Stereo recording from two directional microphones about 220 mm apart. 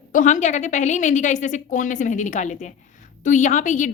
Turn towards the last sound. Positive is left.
turn(degrees=35)  # may be behind; listen again after turning